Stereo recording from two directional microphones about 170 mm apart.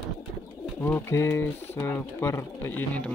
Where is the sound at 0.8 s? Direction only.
15° left (ahead or behind).